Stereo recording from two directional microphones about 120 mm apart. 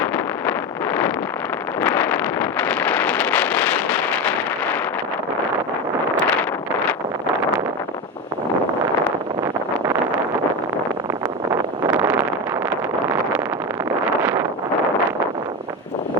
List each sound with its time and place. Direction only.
1.8 s wind noise: 15° left (ahead or behind)
11.9 s vehicle: 20° right (ahead or behind)
14.2 s wind noise: 15° right (ahead or behind)